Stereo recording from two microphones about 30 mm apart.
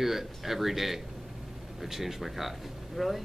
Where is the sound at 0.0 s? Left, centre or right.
Centre.